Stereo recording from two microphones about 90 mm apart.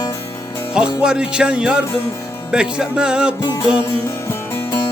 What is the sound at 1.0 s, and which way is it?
Music, 10° right (ahead or behind).